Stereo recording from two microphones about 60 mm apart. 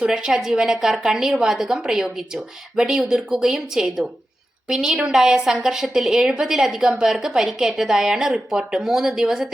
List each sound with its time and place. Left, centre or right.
0.0 s a woman's voice: centre